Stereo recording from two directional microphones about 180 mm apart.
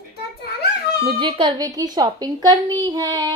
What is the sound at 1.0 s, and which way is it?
A woman's voice, 30° right (ahead or behind).